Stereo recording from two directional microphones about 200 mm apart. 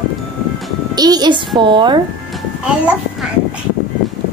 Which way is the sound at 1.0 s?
20° right (ahead or behind).